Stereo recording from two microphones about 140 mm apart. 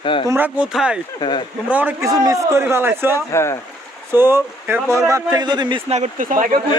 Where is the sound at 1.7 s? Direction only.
15° right (ahead or behind).